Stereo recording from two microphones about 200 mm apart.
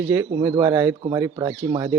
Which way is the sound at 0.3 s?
15° right (ahead or behind).